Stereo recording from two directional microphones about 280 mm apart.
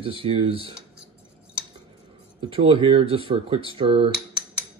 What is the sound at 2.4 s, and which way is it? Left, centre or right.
Speech, centre.